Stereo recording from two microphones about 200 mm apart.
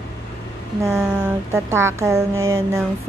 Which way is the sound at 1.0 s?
10° right (ahead or behind).